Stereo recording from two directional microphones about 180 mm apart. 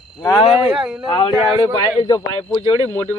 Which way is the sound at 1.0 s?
30° left (ahead or behind).